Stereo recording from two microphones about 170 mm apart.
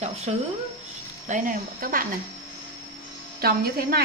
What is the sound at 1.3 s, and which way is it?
Speech, 55° right (ahead or behind).